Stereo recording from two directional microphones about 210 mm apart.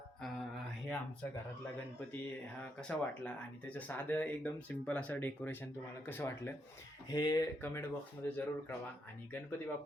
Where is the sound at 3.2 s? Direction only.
5° left (ahead or behind).